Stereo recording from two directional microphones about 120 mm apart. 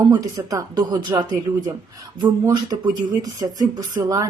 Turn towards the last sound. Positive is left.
turn(degrees=-30)  # may be behind; listen again after turning